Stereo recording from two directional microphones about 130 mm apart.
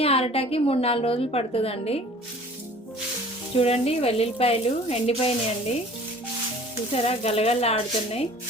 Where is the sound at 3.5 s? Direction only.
50° left (ahead or behind).